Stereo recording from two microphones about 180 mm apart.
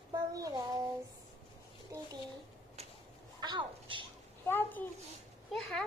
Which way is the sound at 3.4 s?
25° right (ahead or behind).